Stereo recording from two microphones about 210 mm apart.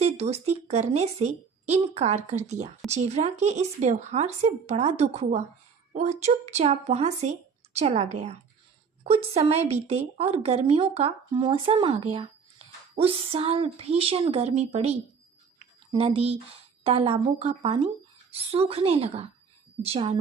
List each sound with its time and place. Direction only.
0.0 s a woman's voice: 30° right (ahead or behind)